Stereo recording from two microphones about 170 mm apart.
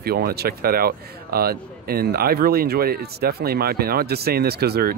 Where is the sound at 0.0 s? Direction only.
65° right (ahead or behind).